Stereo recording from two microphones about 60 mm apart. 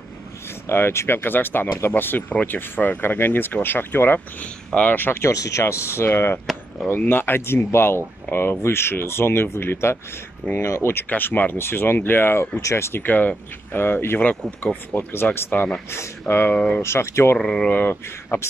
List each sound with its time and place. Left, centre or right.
0.7 s speech: left
5.3 s speech: left
5.6 s speech: left
11.1 s speech: left
11.6 s speech: left
12.5 s speech: left
13.0 s speech: left
15.9 s speech: left
16.5 s speech: centre
16.8 s speech: left
17.4 s speech: centre
17.8 s speech: left